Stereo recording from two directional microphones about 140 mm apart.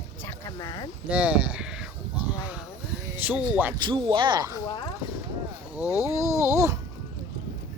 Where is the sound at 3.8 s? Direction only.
35° right (ahead or behind).